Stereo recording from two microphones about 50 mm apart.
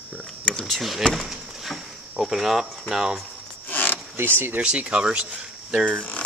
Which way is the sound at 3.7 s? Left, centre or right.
Left.